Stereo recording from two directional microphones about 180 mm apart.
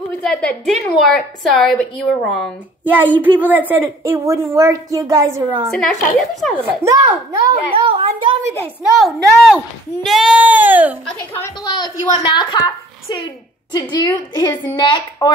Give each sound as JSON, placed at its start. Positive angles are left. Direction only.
{"t": 0.2, "sound": "a woman's voice", "side_deg": 5}
{"t": 5.7, "sound": "a woman's voice", "side_deg": 5}
{"t": 6.6, "sound": "a woman's voice", "side_deg": -15}
{"t": 7.7, "sound": "a child's voice", "side_deg": -30}
{"t": 8.9, "sound": "a woman's voice", "side_deg": 0}
{"t": 11.1, "sound": "a woman's voice", "side_deg": 10}
{"t": 11.6, "sound": "a woman's voice", "side_deg": 25}